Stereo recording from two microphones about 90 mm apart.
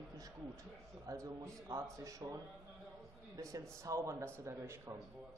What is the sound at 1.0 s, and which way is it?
A man's voice, 35° right (ahead or behind).